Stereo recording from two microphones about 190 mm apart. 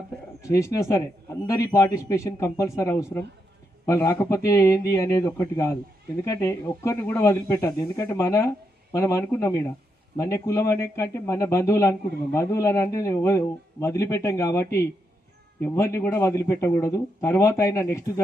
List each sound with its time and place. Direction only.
0.4 s a man's voice: 15° left (ahead or behind)